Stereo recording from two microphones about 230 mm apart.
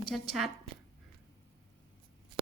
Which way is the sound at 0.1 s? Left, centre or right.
Centre.